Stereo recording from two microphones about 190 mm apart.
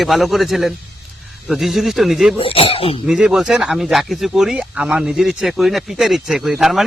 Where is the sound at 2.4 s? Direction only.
30° left (ahead or behind).